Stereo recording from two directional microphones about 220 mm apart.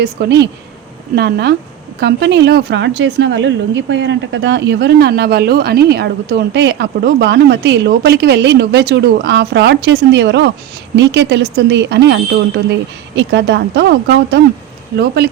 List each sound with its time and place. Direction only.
0.0 s a woman's voice: 50° right (ahead or behind)